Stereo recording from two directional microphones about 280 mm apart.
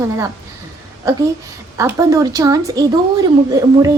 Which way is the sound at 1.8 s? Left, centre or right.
Centre.